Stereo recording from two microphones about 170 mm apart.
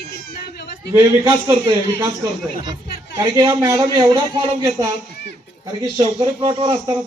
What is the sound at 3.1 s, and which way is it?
A man's voice, 20° right (ahead or behind).